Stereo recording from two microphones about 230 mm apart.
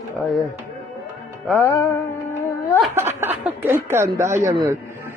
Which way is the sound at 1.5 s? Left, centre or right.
Centre.